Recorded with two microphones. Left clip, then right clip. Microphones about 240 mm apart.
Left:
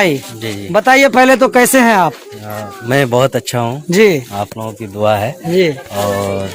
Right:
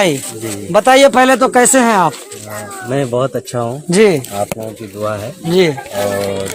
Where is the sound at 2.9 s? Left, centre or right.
Left.